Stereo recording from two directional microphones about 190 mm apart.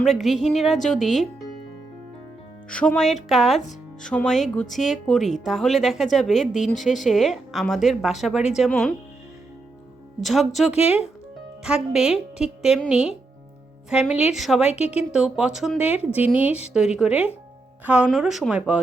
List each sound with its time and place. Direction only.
0.0 s speech: centre (ahead or behind)
2.6 s speech: 5° left (ahead or behind)
10.2 s speech: centre (ahead or behind)
16.5 s a woman's voice: 35° left (ahead or behind)
16.7 s speech: 5° right (ahead or behind)